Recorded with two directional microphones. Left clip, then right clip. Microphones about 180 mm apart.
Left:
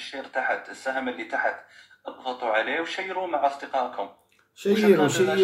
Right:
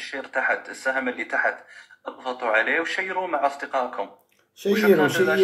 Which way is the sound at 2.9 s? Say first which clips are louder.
Right 3 dB; 45° right (ahead or behind).